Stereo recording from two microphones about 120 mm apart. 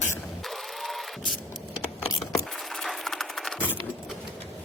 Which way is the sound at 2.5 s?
Centre (ahead or behind).